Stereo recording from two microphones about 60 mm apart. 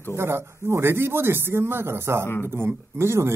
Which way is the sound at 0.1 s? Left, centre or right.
Right.